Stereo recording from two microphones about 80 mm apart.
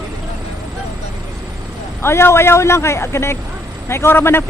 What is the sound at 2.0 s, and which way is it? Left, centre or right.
A man's voice, left.